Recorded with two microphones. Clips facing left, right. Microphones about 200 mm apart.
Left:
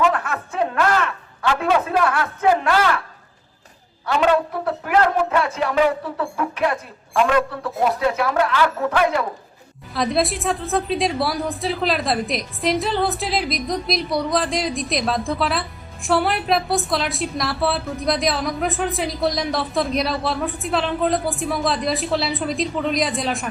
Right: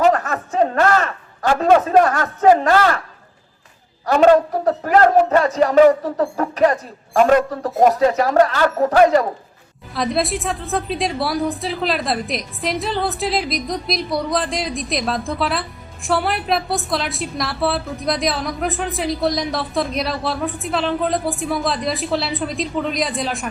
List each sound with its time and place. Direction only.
0.0 s a sound: 40° right (ahead or behind)
4.0 s speech: 45° right (ahead or behind)
9.9 s a woman's voice: centre (ahead or behind)